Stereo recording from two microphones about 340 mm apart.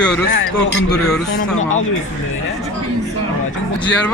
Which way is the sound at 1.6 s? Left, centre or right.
Left.